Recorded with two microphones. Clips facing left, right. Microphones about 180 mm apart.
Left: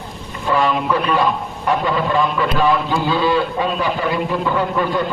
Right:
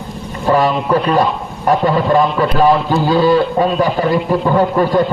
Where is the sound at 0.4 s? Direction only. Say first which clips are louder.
Right 4 dB; 40° right (ahead or behind).